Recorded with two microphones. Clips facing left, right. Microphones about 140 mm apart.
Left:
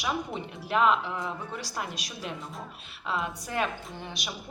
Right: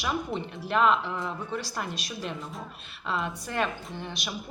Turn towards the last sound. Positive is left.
turn(degrees=10)  # may be behind; listen again after turning